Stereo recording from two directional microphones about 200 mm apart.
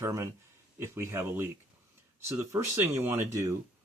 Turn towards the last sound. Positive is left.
turn(degrees=-15)  # may be behind; listen again after turning